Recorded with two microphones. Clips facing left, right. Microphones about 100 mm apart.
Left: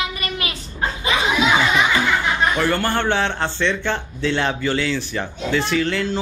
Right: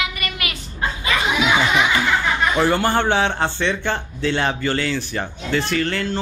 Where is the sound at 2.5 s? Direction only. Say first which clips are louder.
Right 2 dB; 15° right (ahead or behind).